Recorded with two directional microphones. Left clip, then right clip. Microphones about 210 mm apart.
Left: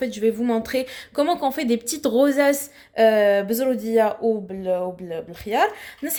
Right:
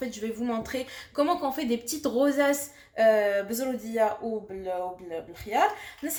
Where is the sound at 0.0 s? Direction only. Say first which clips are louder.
Left 10 dB; 40° left (ahead or behind).